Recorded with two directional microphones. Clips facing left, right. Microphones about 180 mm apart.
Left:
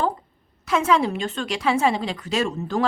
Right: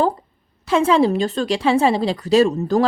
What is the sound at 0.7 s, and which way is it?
A woman's voice, 30° right (ahead or behind).